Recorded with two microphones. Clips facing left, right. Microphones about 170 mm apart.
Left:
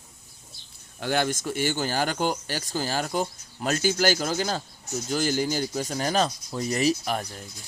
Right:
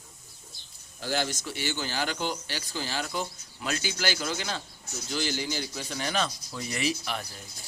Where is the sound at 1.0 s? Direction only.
55° left (ahead or behind); by 7.3 s 40° left (ahead or behind).